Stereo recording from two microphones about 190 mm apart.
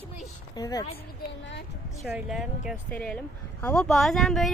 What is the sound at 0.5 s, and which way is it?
Speech, 20° left (ahead or behind).